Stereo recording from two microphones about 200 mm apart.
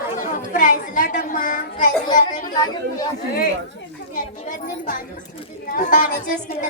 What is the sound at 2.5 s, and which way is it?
Speech, 20° left (ahead or behind).